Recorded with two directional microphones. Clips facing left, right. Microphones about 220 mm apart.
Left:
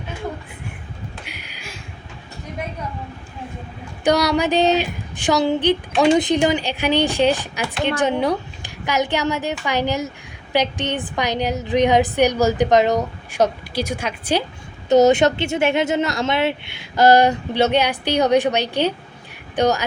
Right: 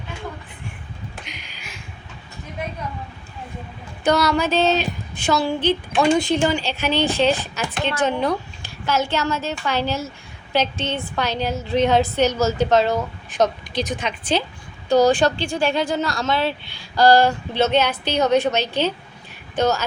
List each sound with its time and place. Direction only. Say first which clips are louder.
1.2 s a sound: left 2 dB; 10° left (ahead or behind)
4.0 s a woman's voice: left 1 dB; 15° left (ahead or behind)
14.8 s a woman's voice: left 3 dB; 20° left (ahead or behind)